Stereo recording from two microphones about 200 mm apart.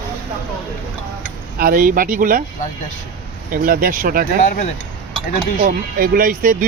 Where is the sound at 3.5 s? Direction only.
45° right (ahead or behind).